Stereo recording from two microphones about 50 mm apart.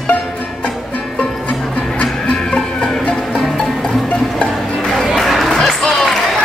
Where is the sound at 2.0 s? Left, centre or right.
Left.